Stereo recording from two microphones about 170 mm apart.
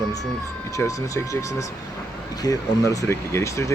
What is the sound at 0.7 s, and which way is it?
Speech, 20° left (ahead or behind).